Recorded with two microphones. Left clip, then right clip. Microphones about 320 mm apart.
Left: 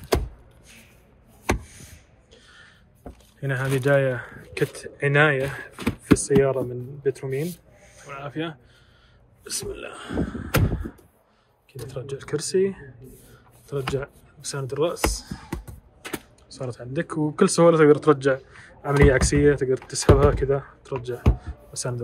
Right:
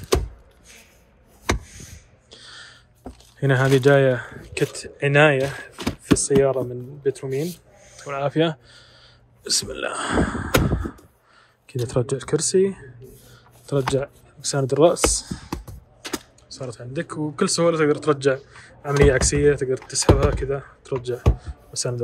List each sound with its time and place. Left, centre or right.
2.3 s speech: centre
11.6 s speech: centre